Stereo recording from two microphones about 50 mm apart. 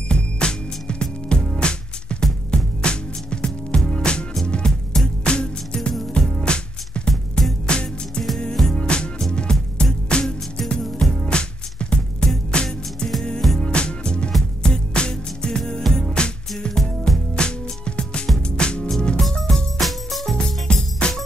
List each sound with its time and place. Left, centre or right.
0.1 s music: centre
11.2 s music: centre
19.8 s music: centre
20.3 s music: centre